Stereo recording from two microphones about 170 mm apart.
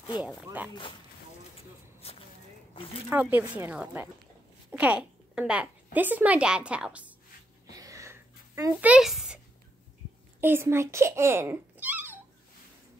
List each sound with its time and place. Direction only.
0.2 s speech: 10° right (ahead or behind)
2.0 s a sound: 35° left (ahead or behind)
3.1 s speech: 10° right (ahead or behind)
7.7 s a sound: 20° right (ahead or behind)
8.9 s speech: centre (ahead or behind)
10.4 s a child's voice: 15° right (ahead or behind)